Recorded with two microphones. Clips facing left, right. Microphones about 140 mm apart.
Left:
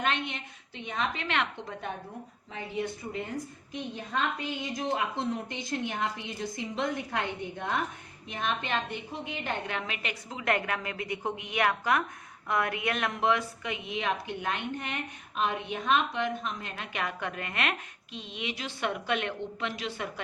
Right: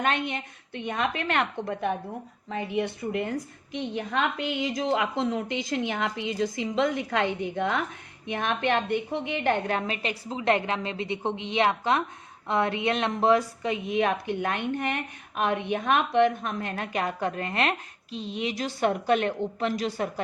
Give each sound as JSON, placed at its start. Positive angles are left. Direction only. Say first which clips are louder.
{"t": 0.0, "sound": "a woman's voice", "louder": "right 4 dB", "side_deg": -50}
{"t": 3.7, "sound": "a woman's voice", "louder": "right 7 dB", "side_deg": -80}
{"t": 8.3, "sound": "a woman's voice", "louder": "right 6 dB", "side_deg": -65}
{"t": 9.6, "sound": "a woman's voice", "louder": "right 7 dB", "side_deg": -40}
{"t": 13.9, "sound": "a woman's voice", "louder": "right 6 dB", "side_deg": -55}
{"t": 17.0, "sound": "a woman's voice", "louder": "right 5 dB", "side_deg": -35}